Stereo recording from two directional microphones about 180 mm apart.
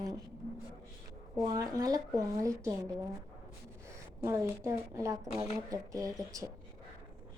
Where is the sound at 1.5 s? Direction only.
20° right (ahead or behind).